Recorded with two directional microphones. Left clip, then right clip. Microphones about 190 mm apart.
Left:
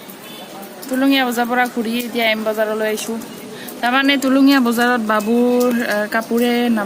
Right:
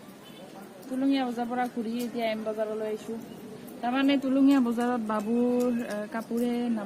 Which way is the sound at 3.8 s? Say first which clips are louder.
Left 11 dB; centre (ahead or behind).